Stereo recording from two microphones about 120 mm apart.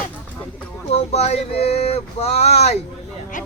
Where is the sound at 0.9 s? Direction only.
60° left (ahead or behind).